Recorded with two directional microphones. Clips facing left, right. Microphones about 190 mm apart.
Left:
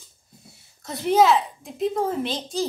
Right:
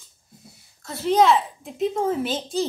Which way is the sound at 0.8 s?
15° left (ahead or behind).